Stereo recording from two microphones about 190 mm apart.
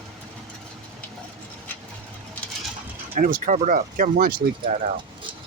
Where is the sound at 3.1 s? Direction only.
45° right (ahead or behind).